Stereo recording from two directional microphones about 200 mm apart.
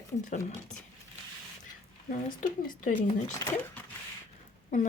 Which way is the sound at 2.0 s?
40° left (ahead or behind).